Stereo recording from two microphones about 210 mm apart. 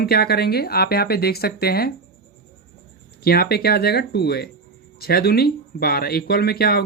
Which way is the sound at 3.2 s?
45° left (ahead or behind).